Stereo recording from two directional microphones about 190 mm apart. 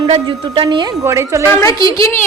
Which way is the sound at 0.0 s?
25° right (ahead or behind).